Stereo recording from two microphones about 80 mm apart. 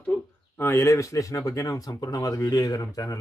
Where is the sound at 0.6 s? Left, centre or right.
Left.